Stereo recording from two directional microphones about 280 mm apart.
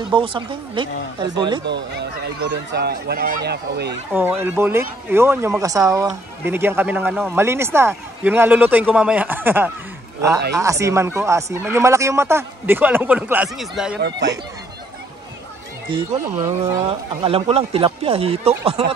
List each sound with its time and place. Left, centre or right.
0.1 s speech: centre
1.7 s speech: right
4.1 s speech: centre
13.9 s speech: right
15.9 s speech: centre
17.2 s speech: right